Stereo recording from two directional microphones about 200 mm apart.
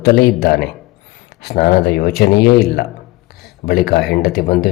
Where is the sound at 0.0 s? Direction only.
50° left (ahead or behind).